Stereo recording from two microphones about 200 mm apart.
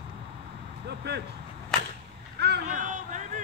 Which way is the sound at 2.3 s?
55° right (ahead or behind).